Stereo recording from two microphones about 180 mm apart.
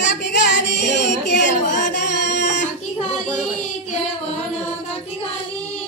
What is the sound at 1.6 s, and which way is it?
Music, 45° left (ahead or behind).